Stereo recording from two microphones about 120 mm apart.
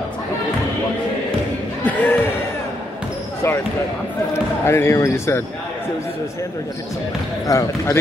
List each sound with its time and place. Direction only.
1.9 s speech: 15° left (ahead or behind)
4.6 s speech: 20° left (ahead or behind)
7.4 s speech: 25° left (ahead or behind)